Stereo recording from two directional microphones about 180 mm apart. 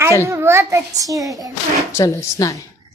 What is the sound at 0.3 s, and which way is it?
A child's voice, 15° right (ahead or behind).